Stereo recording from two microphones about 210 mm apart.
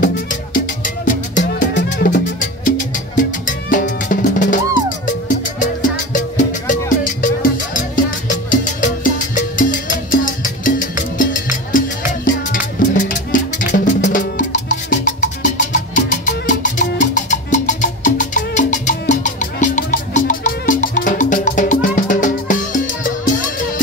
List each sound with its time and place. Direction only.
0.0 s music: 40° left (ahead or behind)
1.4 s music: 55° left (ahead or behind)
1.9 s music: 40° left (ahead or behind)
8.5 s music: 35° left (ahead or behind)
12.3 s music: 40° left (ahead or behind)